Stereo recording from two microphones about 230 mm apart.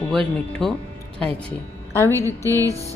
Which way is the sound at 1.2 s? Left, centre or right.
Centre.